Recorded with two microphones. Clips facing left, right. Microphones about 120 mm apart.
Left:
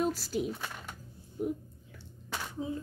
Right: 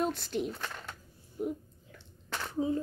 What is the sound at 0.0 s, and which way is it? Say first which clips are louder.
Speech: left 1 dB; 5° left (ahead or behind).